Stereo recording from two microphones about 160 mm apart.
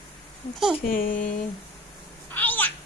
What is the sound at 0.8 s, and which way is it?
Speech, 65° left (ahead or behind).